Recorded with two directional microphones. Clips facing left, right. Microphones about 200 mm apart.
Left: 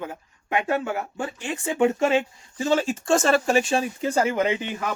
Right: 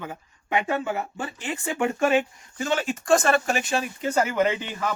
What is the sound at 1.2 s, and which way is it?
Speech, 15° left (ahead or behind).